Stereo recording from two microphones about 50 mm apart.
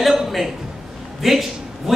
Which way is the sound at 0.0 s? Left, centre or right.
Centre.